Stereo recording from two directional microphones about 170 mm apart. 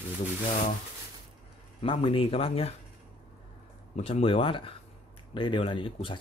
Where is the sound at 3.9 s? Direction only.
35° left (ahead or behind).